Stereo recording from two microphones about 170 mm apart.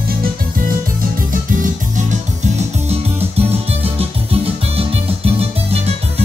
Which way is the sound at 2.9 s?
35° right (ahead or behind).